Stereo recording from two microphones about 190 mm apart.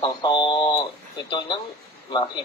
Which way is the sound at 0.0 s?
25° left (ahead or behind).